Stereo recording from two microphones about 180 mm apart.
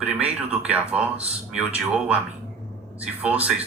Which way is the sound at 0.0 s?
5° right (ahead or behind).